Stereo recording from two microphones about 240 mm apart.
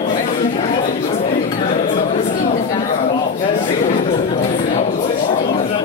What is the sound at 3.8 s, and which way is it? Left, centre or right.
Chatter, left.